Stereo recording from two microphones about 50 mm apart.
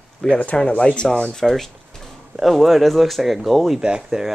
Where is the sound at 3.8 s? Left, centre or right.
Centre.